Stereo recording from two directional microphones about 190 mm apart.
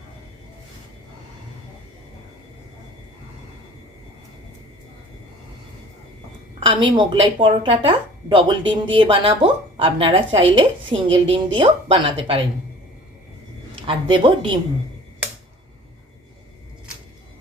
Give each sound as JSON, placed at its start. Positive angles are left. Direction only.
{"t": 6.6, "sound": "a woman's voice", "side_deg": -30}
{"t": 13.8, "sound": "a woman's voice", "side_deg": -25}